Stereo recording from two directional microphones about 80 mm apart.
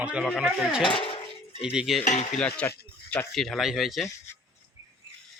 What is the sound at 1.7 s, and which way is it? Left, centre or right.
Speech, centre.